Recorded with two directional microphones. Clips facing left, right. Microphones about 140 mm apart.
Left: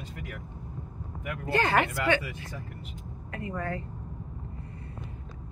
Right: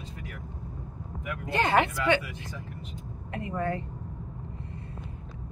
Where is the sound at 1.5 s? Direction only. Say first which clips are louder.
Right 1 dB; 20° right (ahead or behind).